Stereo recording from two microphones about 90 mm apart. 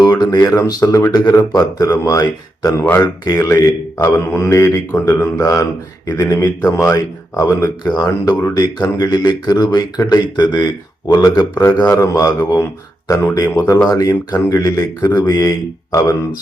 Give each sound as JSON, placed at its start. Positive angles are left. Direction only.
{"t": 0.0, "sound": "a man's voice", "side_deg": 45}
{"t": 4.0, "sound": "a man's voice", "side_deg": 30}
{"t": 7.9, "sound": "a man's voice", "side_deg": 45}